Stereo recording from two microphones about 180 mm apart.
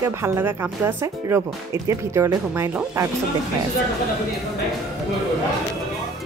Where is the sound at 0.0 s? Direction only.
15° right (ahead or behind).